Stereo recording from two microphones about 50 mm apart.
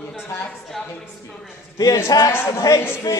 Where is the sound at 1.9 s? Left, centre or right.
Left.